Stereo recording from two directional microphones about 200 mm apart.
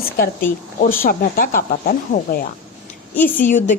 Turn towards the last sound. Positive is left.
turn(degrees=40)  # may be behind; listen again after turning